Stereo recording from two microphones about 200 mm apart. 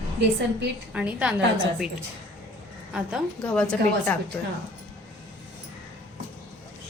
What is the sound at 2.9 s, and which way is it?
Speech, 5° right (ahead or behind).